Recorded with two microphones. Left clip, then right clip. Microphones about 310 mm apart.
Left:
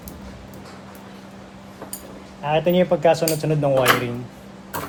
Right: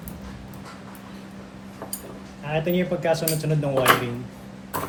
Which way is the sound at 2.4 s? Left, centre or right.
Left.